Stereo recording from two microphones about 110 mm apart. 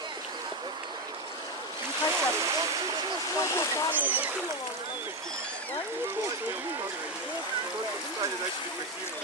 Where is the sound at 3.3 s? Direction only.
30° left (ahead or behind).